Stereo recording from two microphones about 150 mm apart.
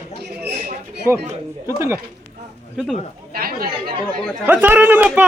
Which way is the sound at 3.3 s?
85° right.